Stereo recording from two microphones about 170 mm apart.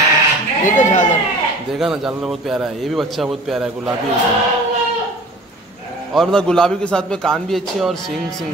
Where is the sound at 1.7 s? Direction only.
5° right (ahead or behind).